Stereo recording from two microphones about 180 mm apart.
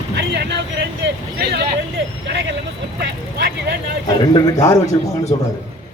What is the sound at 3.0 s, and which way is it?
Speech, 60° right (ahead or behind).